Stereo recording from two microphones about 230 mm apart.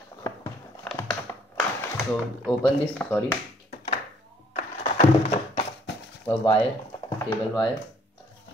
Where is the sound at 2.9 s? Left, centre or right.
Centre.